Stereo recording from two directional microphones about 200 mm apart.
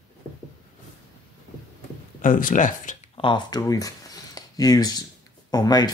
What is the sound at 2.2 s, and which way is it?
Speech, 40° left (ahead or behind).